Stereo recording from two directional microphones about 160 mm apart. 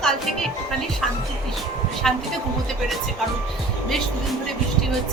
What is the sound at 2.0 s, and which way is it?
Speech, centre (ahead or behind).